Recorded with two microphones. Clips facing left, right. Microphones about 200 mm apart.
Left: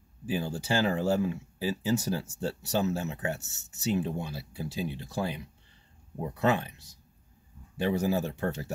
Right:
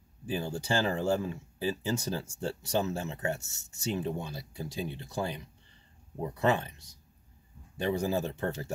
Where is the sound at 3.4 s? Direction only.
5° left (ahead or behind).